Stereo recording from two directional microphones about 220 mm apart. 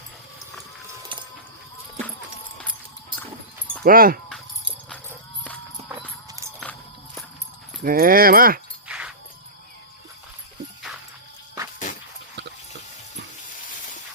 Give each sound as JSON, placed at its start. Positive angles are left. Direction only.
{"t": 3.8, "sound": "speech", "side_deg": -40}
{"t": 7.9, "sound": "speech", "side_deg": -40}
{"t": 8.9, "sound": "music", "side_deg": -5}
{"t": 10.9, "sound": "music", "side_deg": 0}